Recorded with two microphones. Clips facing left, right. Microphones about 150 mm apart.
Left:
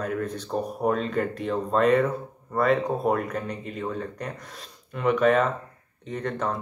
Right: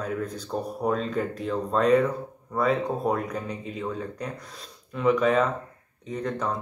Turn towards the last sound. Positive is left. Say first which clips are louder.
# even
turn(degrees=0)  # may be behind; listen again after turning